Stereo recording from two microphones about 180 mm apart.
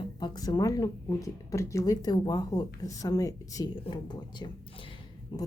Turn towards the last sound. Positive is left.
turn(degrees=25)  # may be behind; listen again after turning